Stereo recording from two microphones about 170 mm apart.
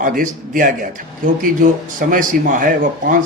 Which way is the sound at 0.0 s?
55° right (ahead or behind).